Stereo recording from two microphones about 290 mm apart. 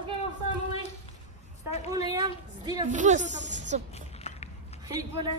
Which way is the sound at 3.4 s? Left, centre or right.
Right.